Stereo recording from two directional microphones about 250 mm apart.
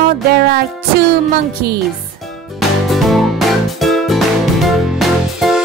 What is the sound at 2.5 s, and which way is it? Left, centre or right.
Music, centre.